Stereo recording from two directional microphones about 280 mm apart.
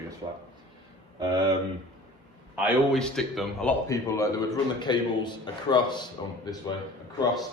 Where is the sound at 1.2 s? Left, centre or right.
Centre.